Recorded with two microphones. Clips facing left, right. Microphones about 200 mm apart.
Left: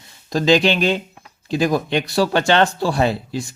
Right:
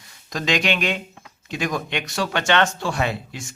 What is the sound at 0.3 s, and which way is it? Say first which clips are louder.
Speech: left 7 dB; 30° left (ahead or behind).